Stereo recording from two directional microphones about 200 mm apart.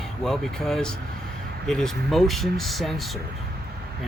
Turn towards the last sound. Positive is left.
turn(degrees=0)  # may be behind; listen again after turning